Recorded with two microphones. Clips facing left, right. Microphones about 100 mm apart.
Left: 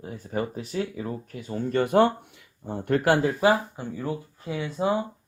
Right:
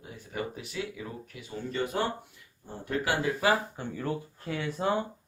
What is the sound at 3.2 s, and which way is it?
Speech, 25° left (ahead or behind).